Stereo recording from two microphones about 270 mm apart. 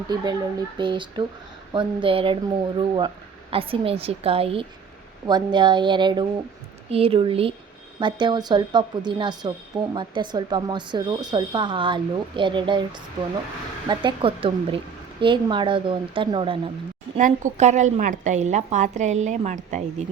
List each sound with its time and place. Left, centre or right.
0.8 s a woman's voice: centre
13.8 s a woman's voice: centre